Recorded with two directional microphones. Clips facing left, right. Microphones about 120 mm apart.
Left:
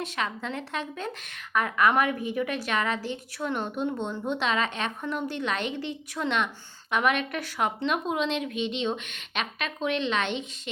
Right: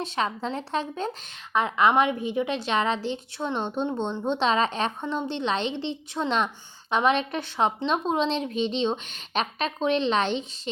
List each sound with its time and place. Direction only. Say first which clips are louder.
0.0 s a woman's voice: right 4 dB; 30° right (ahead or behind)